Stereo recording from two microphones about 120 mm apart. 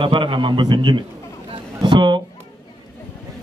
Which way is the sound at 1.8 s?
40° right (ahead or behind).